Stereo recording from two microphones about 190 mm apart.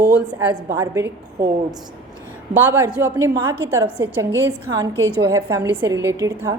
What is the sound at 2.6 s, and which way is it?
A woman's voice, 10° right (ahead or behind).